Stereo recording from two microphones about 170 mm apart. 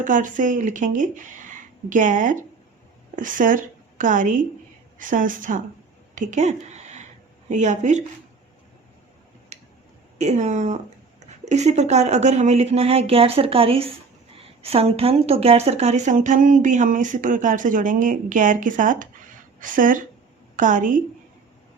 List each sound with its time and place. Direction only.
0.0 s speech: 50° right (ahead or behind)
10.2 s speech: 40° right (ahead or behind)